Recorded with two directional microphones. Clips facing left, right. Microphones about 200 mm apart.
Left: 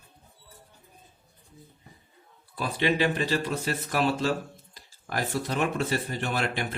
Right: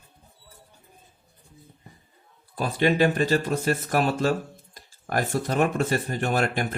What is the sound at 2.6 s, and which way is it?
Speech, 45° right (ahead or behind).